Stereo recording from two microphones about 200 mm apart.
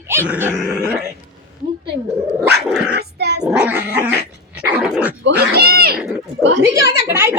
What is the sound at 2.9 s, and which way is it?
Dog, 55° right (ahead or behind).